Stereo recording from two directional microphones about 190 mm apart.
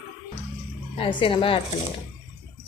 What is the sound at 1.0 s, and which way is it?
Speech, 25° left (ahead or behind).